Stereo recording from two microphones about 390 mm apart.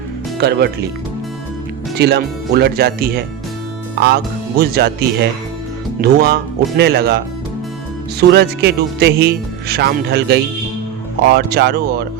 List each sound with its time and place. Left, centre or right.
0.3 s a man's voice: right
2.0 s a man's voice: right
8.3 s a man's voice: right